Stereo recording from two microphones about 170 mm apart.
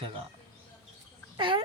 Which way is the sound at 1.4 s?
30° right (ahead or behind).